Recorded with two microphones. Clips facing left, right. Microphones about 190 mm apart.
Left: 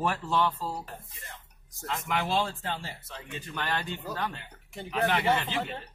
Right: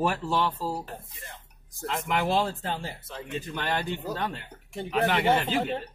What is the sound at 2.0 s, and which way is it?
Speech, 50° right (ahead or behind).